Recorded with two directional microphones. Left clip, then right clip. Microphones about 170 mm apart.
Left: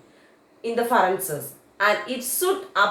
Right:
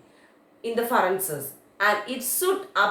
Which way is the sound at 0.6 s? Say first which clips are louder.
Left 3 dB; 20° left (ahead or behind).